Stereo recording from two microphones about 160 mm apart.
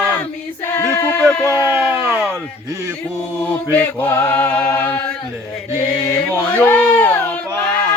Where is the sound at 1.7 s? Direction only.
10° right (ahead or behind).